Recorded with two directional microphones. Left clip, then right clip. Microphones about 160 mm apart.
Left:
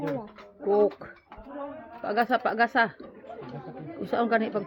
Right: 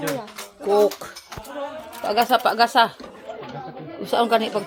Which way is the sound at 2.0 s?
5° right (ahead or behind).